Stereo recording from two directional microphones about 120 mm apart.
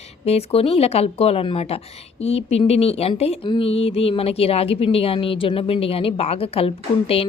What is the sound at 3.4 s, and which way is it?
Speech, 45° left (ahead or behind).